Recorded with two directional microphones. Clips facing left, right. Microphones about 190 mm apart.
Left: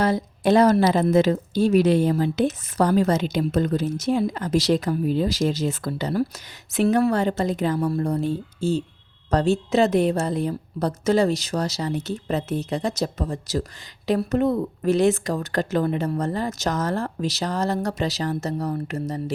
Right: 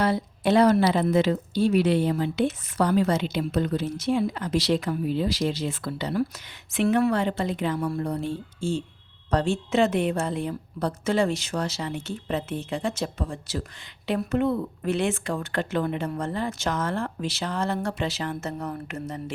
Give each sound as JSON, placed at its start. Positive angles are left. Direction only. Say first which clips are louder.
{"t": 0.0, "sound": "speech", "louder": "left 3 dB", "side_deg": 40}